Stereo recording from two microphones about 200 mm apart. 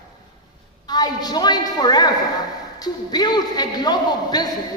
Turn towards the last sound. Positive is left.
turn(degrees=20)  # may be behind; listen again after turning